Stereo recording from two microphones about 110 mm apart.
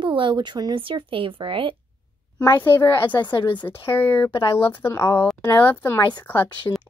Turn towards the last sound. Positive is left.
turn(degrees=15)  # may be behind; listen again after turning